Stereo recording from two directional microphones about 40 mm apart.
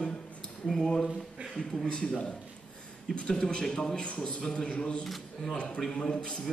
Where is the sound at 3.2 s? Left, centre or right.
Centre.